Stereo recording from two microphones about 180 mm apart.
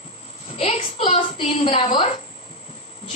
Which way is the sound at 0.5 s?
35° left (ahead or behind).